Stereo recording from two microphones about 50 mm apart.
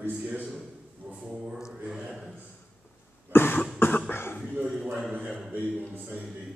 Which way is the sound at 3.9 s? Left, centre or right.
Left.